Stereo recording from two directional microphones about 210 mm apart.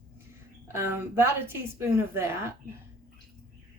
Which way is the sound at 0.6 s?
10° right (ahead or behind).